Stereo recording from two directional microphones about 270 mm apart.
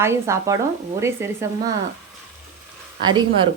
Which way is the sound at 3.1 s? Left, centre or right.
Centre.